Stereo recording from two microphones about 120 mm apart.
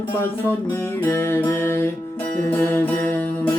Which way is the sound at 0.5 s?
20° left (ahead or behind).